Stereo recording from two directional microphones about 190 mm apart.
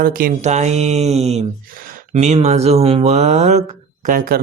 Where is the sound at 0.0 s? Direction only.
50° right (ahead or behind).